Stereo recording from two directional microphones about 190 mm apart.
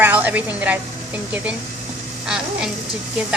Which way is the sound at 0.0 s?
10° right (ahead or behind).